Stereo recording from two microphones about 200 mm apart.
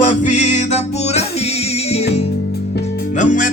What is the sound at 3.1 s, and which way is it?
Music, 40° left (ahead or behind).